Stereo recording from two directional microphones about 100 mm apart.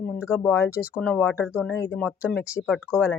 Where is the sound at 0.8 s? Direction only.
15° left (ahead or behind).